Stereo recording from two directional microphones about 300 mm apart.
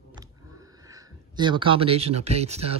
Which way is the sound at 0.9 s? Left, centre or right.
Centre.